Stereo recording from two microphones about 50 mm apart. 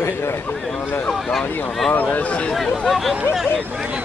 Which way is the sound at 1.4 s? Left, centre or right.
Left.